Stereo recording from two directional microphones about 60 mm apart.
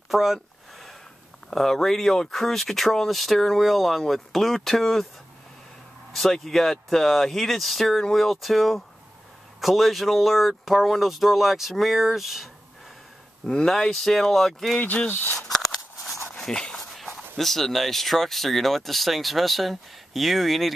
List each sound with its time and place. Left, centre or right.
0.1 s a sound: centre
1.5 s speech: centre
6.1 s speech: centre
13.5 s speech: centre
14.8 s speech: left
15.3 s a sound: centre
16.9 s speech: centre